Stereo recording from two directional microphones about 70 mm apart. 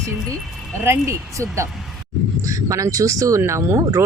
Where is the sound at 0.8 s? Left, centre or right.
Right.